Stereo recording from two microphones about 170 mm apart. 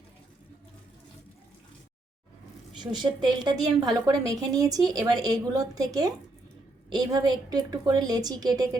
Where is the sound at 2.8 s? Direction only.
25° right (ahead or behind).